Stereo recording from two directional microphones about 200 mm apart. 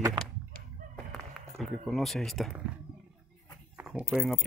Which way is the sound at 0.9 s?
Centre (ahead or behind).